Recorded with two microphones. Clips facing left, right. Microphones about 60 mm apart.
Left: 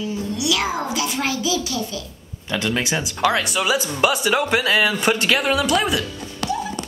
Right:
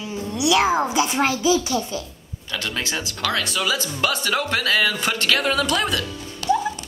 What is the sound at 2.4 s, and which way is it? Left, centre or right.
Speech, left.